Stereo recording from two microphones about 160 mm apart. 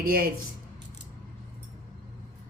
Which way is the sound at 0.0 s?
65° right (ahead or behind).